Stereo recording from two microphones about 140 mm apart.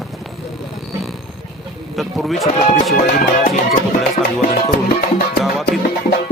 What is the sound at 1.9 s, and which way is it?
Speech, centre (ahead or behind).